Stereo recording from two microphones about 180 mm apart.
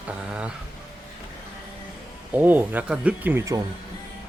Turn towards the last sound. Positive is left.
turn(degrees=-15)  # may be behind; listen again after turning